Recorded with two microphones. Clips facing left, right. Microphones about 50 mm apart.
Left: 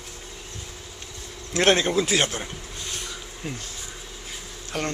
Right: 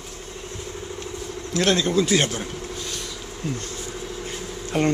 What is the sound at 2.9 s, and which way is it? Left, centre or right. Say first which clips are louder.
Bee: right 2 dB; centre.